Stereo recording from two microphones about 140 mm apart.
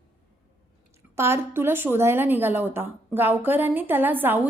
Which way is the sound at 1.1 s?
20° right (ahead or behind).